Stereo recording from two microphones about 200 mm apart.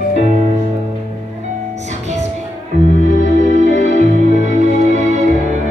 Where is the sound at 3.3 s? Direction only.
35° right (ahead or behind).